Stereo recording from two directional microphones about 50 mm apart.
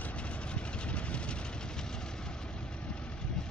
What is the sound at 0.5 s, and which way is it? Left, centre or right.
Vehicle, left.